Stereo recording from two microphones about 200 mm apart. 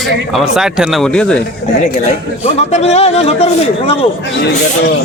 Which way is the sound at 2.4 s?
35° left (ahead or behind).